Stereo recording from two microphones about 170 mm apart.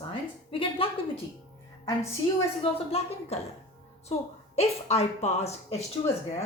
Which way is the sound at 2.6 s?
35° left (ahead or behind).